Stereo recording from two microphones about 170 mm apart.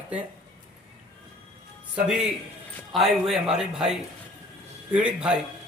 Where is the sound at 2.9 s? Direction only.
Centre (ahead or behind).